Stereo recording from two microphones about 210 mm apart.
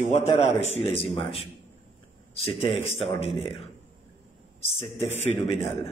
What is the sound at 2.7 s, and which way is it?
Speech, 30° left (ahead or behind).